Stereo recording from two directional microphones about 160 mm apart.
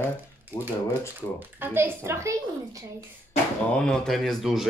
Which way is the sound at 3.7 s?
5° left (ahead or behind).